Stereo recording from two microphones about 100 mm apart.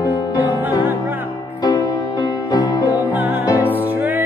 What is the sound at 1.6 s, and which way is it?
Music, 45° left (ahead or behind).